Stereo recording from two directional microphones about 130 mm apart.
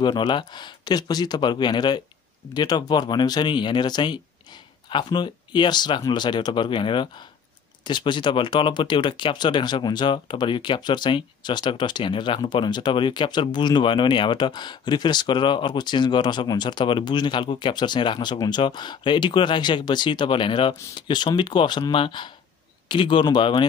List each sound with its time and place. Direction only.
0.0 s speech: 35° left (ahead or behind)